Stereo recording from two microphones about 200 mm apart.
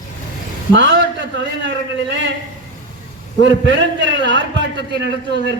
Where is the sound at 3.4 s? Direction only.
65° right (ahead or behind).